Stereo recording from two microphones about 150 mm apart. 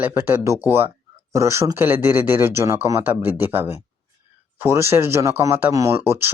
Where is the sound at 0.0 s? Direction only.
15° right (ahead or behind).